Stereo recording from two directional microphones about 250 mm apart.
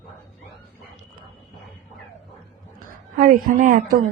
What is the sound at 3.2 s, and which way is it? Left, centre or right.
Speech, right.